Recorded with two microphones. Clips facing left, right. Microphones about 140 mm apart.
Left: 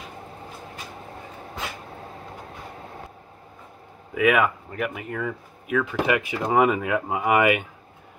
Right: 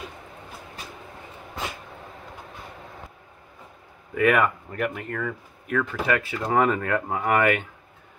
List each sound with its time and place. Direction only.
4.1 s speech: 5° left (ahead or behind)